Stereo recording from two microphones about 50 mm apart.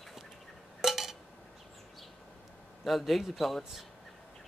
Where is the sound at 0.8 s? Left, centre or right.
Centre.